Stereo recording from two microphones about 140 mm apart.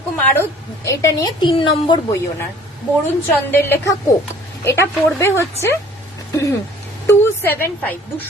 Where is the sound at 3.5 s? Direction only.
15° left (ahead or behind).